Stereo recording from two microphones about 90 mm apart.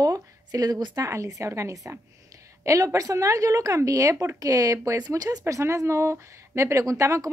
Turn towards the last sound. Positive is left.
turn(degrees=-35)  # may be behind; listen again after turning